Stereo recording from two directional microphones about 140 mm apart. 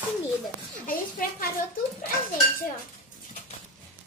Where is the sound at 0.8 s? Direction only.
90° left.